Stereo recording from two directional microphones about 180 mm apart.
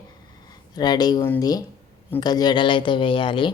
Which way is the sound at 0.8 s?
20° left (ahead or behind).